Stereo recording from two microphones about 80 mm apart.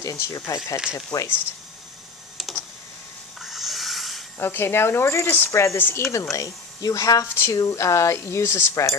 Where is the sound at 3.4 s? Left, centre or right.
Centre.